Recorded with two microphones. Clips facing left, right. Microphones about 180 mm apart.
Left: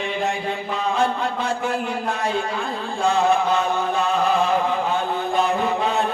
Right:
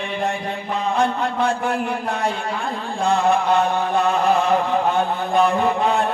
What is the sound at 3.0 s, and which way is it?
Chant, 60° right (ahead or behind).